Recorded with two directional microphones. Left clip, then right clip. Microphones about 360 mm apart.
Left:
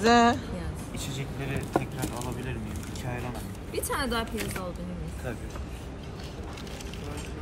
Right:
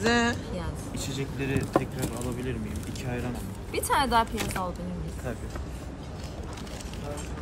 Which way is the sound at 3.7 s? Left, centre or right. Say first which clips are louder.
Right 6 dB; right.